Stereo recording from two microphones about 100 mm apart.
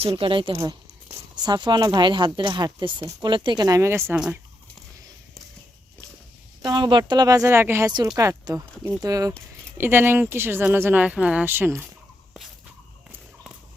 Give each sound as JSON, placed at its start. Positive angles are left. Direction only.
{"t": 0.0, "sound": "speech", "side_deg": -70}
{"t": 0.6, "sound": "a sound", "side_deg": -30}
{"t": 1.5, "sound": "speech", "side_deg": -45}
{"t": 3.8, "sound": "speech", "side_deg": -25}
{"t": 6.6, "sound": "speech", "side_deg": -45}
{"t": 7.4, "sound": "speech", "side_deg": -25}
{"t": 9.7, "sound": "speech", "side_deg": -25}
{"t": 11.4, "sound": "speech", "side_deg": -20}